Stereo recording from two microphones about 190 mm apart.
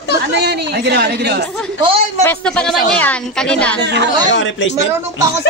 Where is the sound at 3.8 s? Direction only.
65° right (ahead or behind).